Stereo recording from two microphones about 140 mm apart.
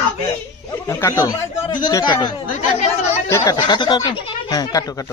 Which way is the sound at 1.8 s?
30° left (ahead or behind).